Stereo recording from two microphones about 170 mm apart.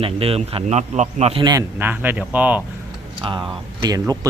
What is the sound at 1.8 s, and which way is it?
Speech, 10° right (ahead or behind).